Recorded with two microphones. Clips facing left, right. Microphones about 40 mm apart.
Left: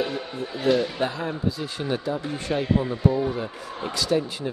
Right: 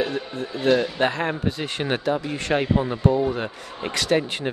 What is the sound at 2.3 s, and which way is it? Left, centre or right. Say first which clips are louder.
Speech: right 3 dB; right.